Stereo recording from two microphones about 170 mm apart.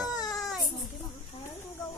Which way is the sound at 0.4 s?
Centre (ahead or behind).